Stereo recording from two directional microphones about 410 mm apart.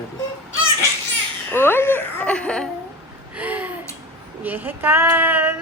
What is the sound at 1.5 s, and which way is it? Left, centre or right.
Giggle, centre.